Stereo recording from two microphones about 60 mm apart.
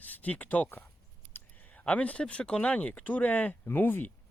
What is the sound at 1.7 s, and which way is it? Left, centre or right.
Speech, centre.